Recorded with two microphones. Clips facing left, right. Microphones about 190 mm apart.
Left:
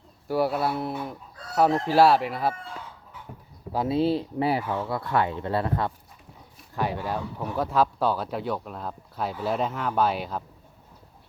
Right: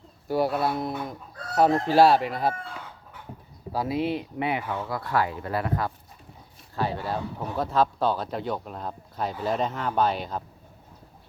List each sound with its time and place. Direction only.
0.3 s speech: 5° left (ahead or behind)
3.7 s speech: 25° left (ahead or behind)
6.7 s speech: 15° left (ahead or behind)